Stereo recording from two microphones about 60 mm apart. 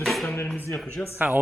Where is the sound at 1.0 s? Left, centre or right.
Left.